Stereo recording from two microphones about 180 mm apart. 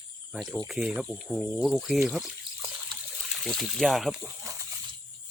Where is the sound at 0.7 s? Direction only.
5° right (ahead or behind).